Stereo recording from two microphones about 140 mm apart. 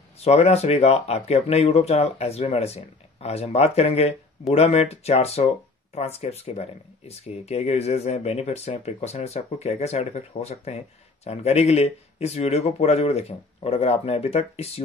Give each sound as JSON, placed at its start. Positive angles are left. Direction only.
{"t": 0.2, "sound": "speech", "side_deg": 50}